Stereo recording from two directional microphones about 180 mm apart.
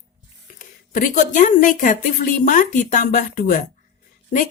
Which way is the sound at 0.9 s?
45° left (ahead or behind).